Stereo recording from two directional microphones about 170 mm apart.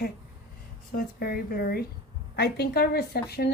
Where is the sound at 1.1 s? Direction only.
60° left (ahead or behind).